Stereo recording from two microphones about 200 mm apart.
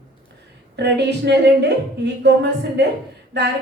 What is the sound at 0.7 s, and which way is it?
Speech, 60° right (ahead or behind).